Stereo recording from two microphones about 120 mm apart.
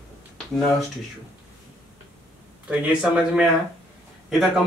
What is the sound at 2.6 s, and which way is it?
Speech, 10° right (ahead or behind).